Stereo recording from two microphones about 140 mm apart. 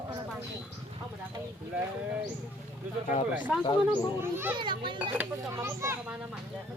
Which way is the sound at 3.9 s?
15° right (ahead or behind).